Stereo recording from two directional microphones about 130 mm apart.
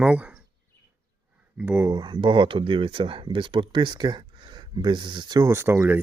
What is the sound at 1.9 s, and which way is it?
Speech, 30° right (ahead or behind).